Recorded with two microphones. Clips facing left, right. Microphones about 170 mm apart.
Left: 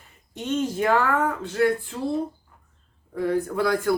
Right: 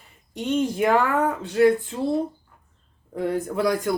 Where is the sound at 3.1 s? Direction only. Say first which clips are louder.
Left 1 dB; 20° right (ahead or behind).